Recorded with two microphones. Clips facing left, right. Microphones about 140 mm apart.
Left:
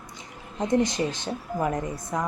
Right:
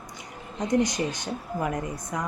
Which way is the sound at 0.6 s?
25° left (ahead or behind).